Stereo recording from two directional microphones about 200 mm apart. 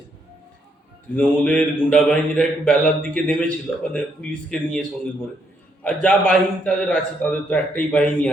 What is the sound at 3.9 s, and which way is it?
Speech, 5° left (ahead or behind).